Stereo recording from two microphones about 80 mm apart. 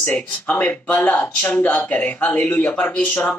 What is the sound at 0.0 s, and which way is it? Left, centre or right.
Speech, left.